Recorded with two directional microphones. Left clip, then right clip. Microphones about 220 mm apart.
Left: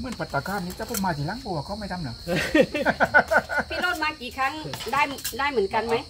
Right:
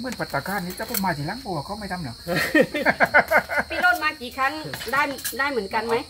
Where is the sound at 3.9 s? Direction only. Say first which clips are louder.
Right 2 dB; 50° left (ahead or behind).